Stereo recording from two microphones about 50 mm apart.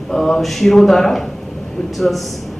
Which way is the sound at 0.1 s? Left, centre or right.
Centre.